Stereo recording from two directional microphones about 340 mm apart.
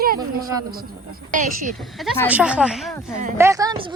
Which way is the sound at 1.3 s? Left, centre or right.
Right.